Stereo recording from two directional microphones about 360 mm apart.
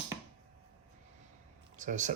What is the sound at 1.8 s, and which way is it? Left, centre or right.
Speech, right.